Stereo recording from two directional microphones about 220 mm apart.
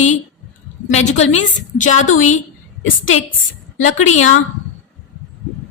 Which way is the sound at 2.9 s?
65° left (ahead or behind).